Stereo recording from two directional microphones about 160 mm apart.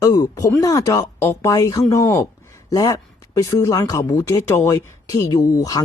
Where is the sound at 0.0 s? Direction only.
20° left (ahead or behind).